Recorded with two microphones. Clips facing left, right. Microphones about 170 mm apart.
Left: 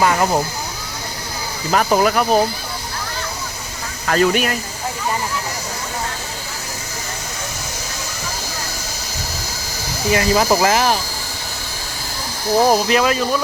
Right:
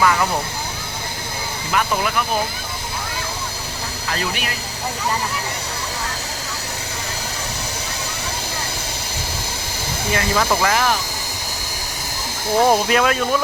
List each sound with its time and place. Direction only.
0.0 s speech: 30° left (ahead or behind)
1.7 s speech: 45° left (ahead or behind)
4.0 s speech: 55° left (ahead or behind)
10.1 s speech: 25° left (ahead or behind)
12.5 s speech: 10° left (ahead or behind)